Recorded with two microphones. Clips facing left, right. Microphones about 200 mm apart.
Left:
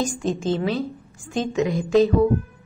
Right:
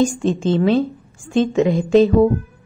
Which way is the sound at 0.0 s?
25° right (ahead or behind).